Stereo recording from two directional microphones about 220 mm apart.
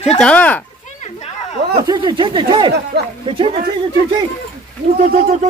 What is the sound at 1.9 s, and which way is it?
Speech, 20° right (ahead or behind).